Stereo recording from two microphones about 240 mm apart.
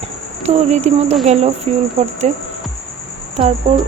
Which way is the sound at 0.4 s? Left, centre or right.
Right.